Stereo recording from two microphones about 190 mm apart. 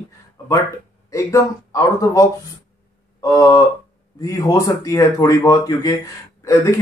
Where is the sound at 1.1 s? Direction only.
15° left (ahead or behind).